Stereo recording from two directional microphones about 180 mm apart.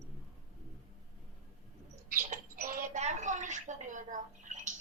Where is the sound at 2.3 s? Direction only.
45° right (ahead or behind).